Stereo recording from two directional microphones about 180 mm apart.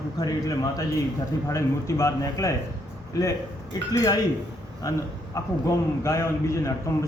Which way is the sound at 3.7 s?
20° left (ahead or behind).